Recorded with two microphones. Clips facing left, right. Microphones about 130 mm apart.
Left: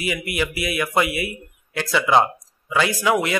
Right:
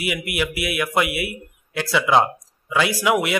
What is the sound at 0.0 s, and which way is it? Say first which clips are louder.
A man's voice: even; 5° right (ahead or behind).